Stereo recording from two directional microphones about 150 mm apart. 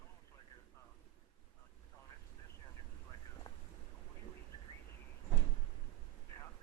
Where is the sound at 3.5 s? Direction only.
30° left (ahead or behind).